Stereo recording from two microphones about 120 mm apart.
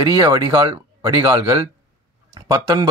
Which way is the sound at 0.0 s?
30° right (ahead or behind).